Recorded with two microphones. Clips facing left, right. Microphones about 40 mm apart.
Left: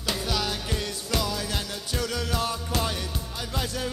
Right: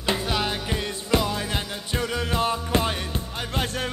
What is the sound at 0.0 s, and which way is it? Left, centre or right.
Music, right.